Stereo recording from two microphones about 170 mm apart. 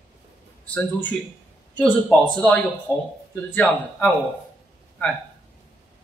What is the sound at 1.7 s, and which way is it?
A man's voice, 5° left (ahead or behind).